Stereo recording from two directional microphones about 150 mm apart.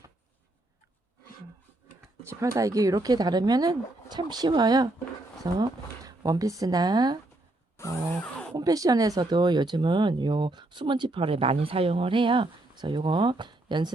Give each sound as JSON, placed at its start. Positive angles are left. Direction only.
{"t": 2.2, "sound": "speech", "side_deg": -20}
{"t": 7.8, "sound": "a sound", "side_deg": 5}
{"t": 8.5, "sound": "speech", "side_deg": -25}